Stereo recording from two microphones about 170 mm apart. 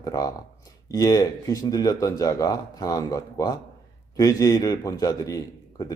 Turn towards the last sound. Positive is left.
turn(degrees=20)  # may be behind; listen again after turning